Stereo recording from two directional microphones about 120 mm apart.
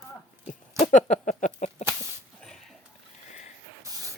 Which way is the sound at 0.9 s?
90° left.